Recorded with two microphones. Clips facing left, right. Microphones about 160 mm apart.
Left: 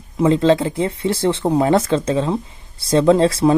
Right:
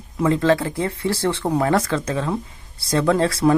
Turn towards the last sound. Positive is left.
turn(degrees=25)  # may be behind; listen again after turning